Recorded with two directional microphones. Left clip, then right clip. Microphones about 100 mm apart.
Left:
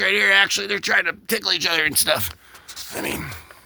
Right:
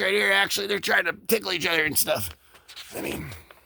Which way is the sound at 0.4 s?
70° right (ahead or behind).